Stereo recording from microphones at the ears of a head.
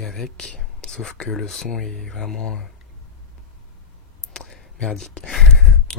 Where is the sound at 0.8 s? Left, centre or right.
Left.